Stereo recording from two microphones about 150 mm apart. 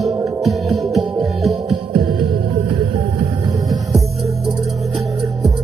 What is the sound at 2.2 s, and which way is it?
Music, 35° right (ahead or behind).